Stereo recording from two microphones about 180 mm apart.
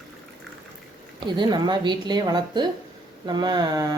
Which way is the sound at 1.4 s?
25° right (ahead or behind).